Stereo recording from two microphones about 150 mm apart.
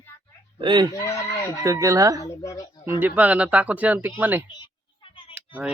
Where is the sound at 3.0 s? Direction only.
10° right (ahead or behind).